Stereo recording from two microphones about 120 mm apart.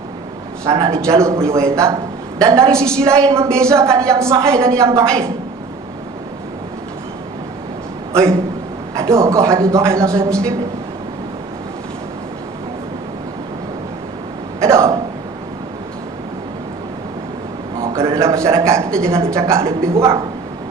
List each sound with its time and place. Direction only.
0.6 s a man's voice: 25° right (ahead or behind)
2.6 s a woman's voice: 5° left (ahead or behind)
3.2 s a man's voice: 25° right (ahead or behind)
8.1 s a man's voice: 25° right (ahead or behind)
14.6 s a sound: 25° right (ahead or behind)
17.9 s a sound: 25° right (ahead or behind)
18.3 s a man's voice: 25° right (ahead or behind)